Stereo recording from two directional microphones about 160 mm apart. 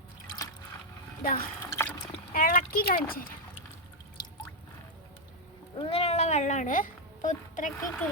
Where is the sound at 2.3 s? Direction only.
60° left (ahead or behind).